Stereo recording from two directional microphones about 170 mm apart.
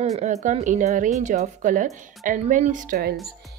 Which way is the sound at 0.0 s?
40° right (ahead or behind).